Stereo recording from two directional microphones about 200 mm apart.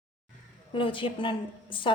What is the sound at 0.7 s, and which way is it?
A woman's voice, 25° left (ahead or behind).